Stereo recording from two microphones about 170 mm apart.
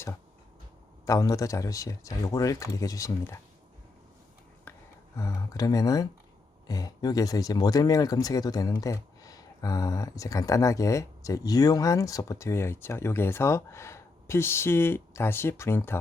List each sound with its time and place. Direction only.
1.0 s speech: 20° left (ahead or behind)
5.1 s speech: 20° left (ahead or behind)